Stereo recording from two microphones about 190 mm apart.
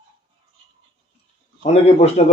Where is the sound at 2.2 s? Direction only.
35° left (ahead or behind).